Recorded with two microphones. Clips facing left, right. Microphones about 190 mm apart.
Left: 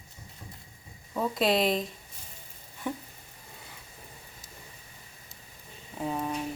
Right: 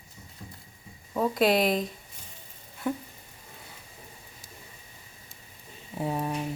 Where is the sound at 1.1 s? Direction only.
Centre (ahead or behind).